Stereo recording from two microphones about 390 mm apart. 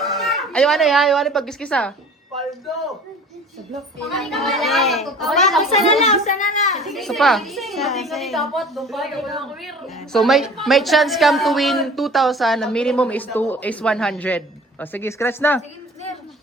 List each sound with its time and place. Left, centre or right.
0.0 s a woman's voice: centre
4.1 s a child's voice: centre
6.5 s a child's voice: centre
6.7 s a child's voice: centre